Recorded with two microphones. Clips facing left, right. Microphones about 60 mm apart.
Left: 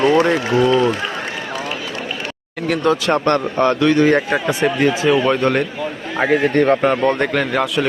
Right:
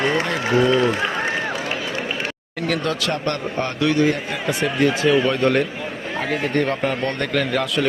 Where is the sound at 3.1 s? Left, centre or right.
Left.